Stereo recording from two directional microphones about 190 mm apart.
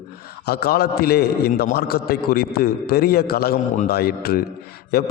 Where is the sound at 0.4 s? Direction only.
55° left (ahead or behind).